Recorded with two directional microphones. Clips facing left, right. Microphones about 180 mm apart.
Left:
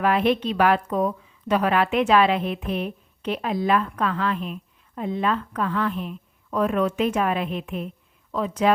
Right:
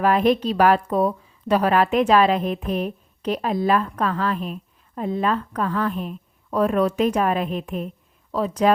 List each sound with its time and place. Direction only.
0.0 s a woman's voice: 40° right (ahead or behind)